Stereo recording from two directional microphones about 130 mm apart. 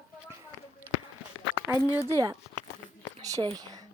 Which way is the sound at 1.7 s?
25° left (ahead or behind).